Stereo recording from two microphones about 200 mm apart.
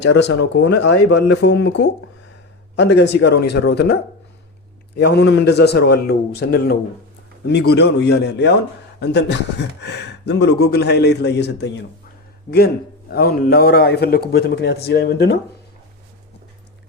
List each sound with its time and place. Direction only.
0.0 s speech: 60° left (ahead or behind)
4.9 s a man's voice: 55° left (ahead or behind)